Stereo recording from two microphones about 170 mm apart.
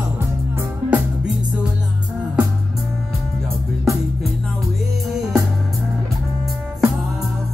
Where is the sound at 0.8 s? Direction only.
10° right (ahead or behind).